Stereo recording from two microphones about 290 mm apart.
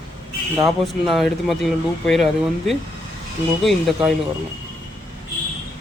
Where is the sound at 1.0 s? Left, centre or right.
Centre.